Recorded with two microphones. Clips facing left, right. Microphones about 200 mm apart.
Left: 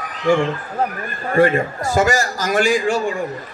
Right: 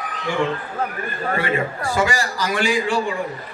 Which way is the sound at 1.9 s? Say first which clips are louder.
Left 4 dB; 45° left (ahead or behind).